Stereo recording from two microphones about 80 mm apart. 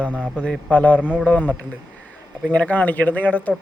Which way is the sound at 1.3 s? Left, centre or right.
Centre.